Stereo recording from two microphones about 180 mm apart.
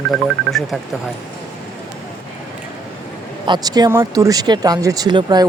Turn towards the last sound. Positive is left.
turn(degrees=-25)  # may be behind; listen again after turning